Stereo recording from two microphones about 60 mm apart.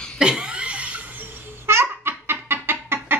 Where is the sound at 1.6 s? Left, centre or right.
Right.